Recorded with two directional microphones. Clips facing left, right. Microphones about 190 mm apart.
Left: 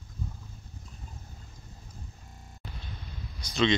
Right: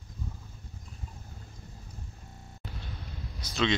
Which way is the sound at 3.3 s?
5° right (ahead or behind).